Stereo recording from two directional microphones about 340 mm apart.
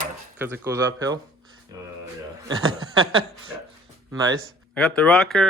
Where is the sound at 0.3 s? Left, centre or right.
Centre.